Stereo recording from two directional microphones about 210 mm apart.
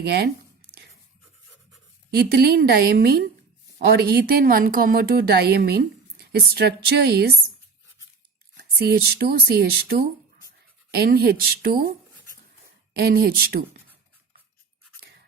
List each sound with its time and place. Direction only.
0.0 s a woman's voice: 50° right (ahead or behind)
2.1 s a woman's voice: 50° right (ahead or behind)
8.5 s a woman's voice: 50° right (ahead or behind)
12.9 s a woman's voice: 50° right (ahead or behind)